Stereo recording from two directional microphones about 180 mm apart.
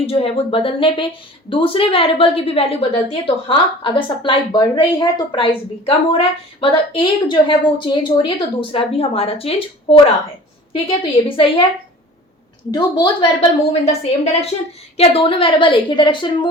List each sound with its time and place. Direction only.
0.0 s a woman's voice: 30° left (ahead or behind)
12.7 s a woman's voice: 25° left (ahead or behind)